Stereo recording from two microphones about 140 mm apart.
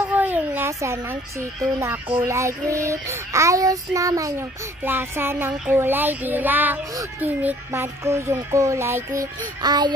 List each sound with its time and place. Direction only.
0.0 s speech: 10° right (ahead or behind)
2.2 s child singing: 20° right (ahead or behind)